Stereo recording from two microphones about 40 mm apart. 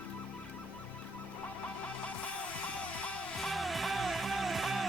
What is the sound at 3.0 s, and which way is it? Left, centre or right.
Music, left.